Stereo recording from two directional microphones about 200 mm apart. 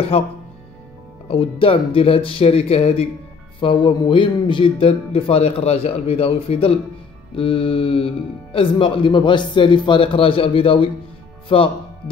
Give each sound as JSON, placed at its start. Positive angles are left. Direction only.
{"t": 1.3, "sound": "speech", "side_deg": 25}